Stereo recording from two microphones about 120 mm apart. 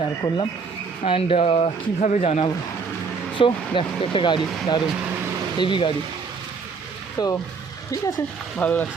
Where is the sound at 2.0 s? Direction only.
80° left.